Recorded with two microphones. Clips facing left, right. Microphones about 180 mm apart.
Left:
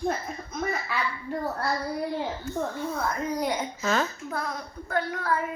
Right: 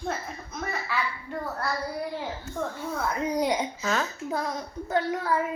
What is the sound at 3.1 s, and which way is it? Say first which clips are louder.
A child's voice: right 2 dB; 15° right (ahead or behind).